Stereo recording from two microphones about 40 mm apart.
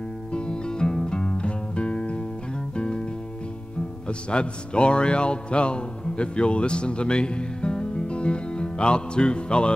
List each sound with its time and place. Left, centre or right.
0.3 s music: left
4.3 s music: left